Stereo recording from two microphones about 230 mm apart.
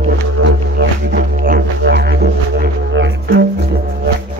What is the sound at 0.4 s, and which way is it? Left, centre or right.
Music, right.